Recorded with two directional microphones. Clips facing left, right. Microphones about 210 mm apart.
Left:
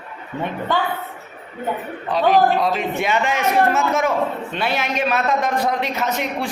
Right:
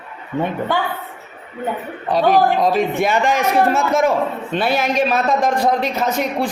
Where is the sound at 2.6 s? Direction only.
40° right (ahead or behind).